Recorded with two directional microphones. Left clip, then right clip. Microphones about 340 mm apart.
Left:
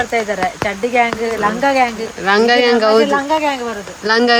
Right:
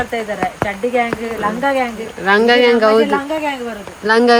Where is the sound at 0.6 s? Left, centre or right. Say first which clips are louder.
Left 2 dB; left.